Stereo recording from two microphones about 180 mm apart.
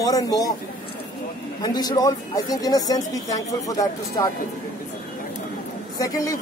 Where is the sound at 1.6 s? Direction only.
20° left (ahead or behind).